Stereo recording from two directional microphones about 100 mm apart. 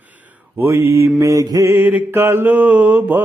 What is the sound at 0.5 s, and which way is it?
Mantra, 25° right (ahead or behind).